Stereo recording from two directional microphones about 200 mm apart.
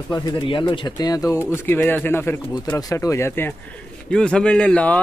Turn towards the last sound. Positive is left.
turn(degrees=5)  # may be behind; listen again after turning